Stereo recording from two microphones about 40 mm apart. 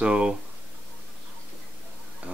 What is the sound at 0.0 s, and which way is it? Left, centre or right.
Speech, right.